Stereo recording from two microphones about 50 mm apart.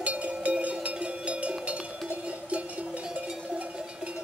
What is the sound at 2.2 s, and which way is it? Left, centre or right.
Music, right.